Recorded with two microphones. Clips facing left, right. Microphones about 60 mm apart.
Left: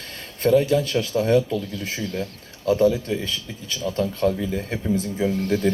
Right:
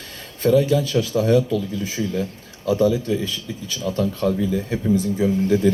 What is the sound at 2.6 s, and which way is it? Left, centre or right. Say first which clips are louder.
Speech: even; left.